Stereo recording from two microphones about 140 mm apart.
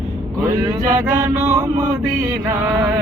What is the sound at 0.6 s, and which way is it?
Chant, 25° right (ahead or behind).